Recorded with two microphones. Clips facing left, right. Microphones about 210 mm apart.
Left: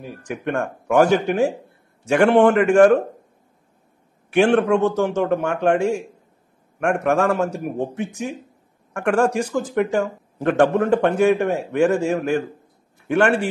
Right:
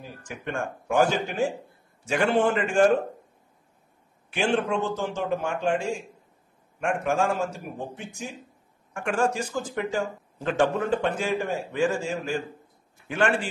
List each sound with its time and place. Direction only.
0.0 s speech: 60° left (ahead or behind)
4.3 s a man's voice: 65° left (ahead or behind)